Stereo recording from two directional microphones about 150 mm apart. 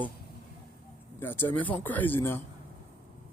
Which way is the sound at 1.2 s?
15° left (ahead or behind).